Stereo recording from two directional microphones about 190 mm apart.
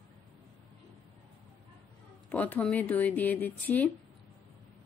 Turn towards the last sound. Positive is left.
turn(degrees=10)  # may be behind; listen again after turning